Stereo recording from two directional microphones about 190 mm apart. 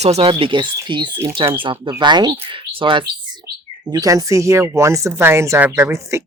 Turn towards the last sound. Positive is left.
turn(degrees=-15)  # may be behind; listen again after turning